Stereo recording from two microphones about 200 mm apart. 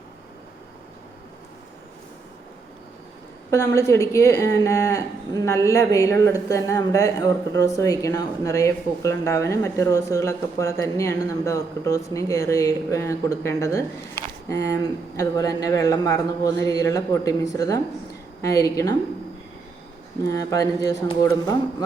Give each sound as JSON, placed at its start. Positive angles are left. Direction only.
{"t": 3.5, "sound": "speech", "side_deg": 15}
{"t": 20.2, "sound": "speech", "side_deg": 15}